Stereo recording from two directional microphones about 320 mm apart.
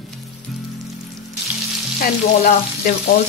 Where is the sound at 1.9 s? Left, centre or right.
Left.